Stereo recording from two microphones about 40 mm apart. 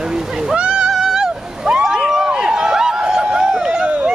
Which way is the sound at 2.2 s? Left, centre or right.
Right.